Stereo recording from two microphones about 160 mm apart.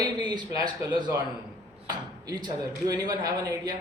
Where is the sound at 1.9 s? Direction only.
25° right (ahead or behind).